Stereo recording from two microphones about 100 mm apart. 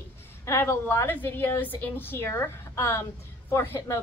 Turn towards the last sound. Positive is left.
turn(degrees=25)  # may be behind; listen again after turning